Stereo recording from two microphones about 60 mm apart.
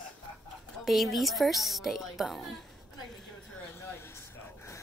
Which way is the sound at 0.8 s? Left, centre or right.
Centre.